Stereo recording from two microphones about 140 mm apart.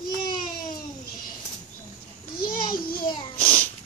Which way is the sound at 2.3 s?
90° left.